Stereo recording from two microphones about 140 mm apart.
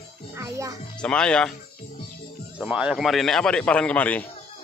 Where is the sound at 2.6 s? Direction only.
5° right (ahead or behind); by 4.2 s 10° left (ahead or behind).